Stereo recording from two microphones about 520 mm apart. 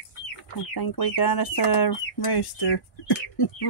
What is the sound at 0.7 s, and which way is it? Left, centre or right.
Speech, left.